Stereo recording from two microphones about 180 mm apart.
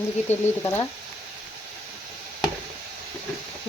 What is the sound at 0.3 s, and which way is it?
Speech, 15° left (ahead or behind).